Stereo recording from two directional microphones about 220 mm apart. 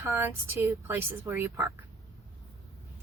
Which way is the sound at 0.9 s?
10° right (ahead or behind).